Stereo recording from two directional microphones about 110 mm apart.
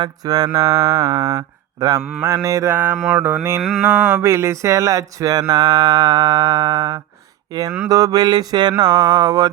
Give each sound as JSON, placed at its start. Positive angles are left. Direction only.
{"t": 0.0, "sound": "music", "side_deg": -35}
{"t": 2.7, "sound": "mantra", "side_deg": -15}
{"t": 3.6, "sound": "mantra", "side_deg": -5}
{"t": 4.2, "sound": "music", "side_deg": -25}